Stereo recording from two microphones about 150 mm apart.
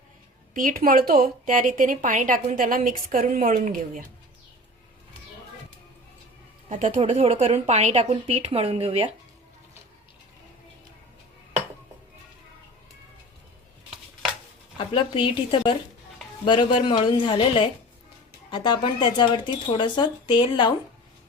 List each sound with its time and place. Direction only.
0.5 s a woman's voice: 65° right (ahead or behind)
6.7 s a woman's voice: 55° right (ahead or behind); by 9.1 s 40° right (ahead or behind)
14.8 s speech: 35° left (ahead or behind)